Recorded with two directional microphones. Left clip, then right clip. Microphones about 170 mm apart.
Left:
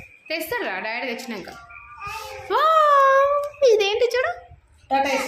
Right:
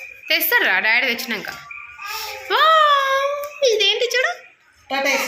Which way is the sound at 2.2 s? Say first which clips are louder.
Right 3 dB; 20° left (ahead or behind).